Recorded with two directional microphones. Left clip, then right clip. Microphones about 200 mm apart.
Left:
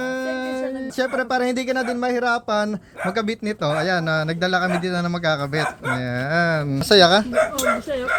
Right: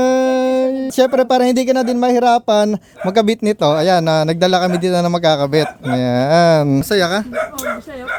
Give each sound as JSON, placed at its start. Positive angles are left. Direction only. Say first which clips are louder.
{"t": 0.0, "sound": "speech", "louder": "right 12 dB", "side_deg": -55}
{"t": 6.9, "sound": "speech", "louder": "left 4 dB", "side_deg": -25}